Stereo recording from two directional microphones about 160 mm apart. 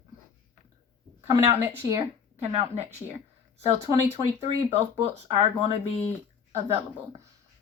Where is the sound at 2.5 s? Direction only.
35° right (ahead or behind).